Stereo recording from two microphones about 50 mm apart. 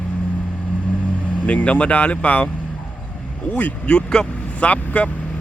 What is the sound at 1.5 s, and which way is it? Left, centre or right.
Speech, left.